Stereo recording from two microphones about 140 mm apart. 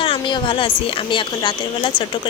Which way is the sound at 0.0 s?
35° left (ahead or behind).